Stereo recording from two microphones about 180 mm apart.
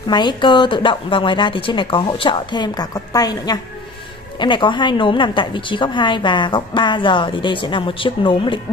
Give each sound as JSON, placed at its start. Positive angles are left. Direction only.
{"t": 0.1, "sound": "a woman's voice", "side_deg": 25}